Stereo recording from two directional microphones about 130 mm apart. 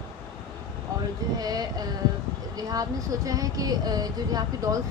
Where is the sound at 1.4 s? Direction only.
30° right (ahead or behind).